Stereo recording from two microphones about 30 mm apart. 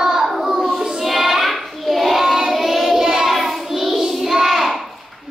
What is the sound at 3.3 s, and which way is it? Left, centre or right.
Child singing, centre.